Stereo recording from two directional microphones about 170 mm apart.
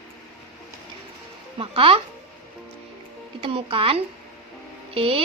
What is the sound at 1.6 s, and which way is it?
Speech, 30° right (ahead or behind).